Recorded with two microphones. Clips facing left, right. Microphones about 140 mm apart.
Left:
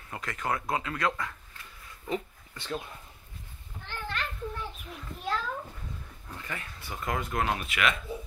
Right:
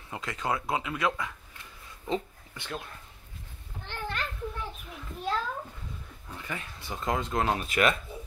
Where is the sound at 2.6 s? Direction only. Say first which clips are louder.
Left 3 dB; 5° left (ahead or behind).